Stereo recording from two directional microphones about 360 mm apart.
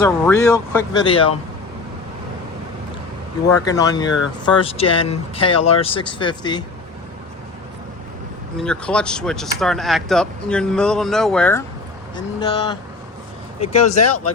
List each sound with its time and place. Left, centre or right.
0.0 s speech: centre
3.7 s speech: centre
8.5 s speech: centre